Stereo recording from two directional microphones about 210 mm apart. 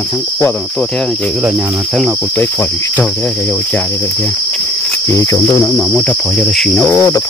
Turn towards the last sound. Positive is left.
turn(degrees=10)  # may be behind; listen again after turning